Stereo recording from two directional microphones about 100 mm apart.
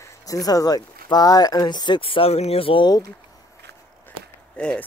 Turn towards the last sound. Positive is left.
turn(degrees=10)  # may be behind; listen again after turning